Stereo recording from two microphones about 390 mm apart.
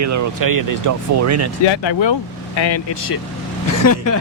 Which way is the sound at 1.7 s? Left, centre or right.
Left.